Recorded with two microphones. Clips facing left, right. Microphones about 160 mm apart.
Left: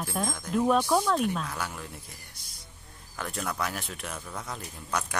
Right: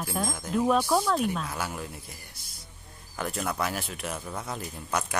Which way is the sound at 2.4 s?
5° right (ahead or behind).